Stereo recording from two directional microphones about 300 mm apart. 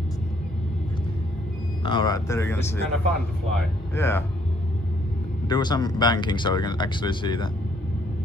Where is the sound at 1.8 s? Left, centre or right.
Centre.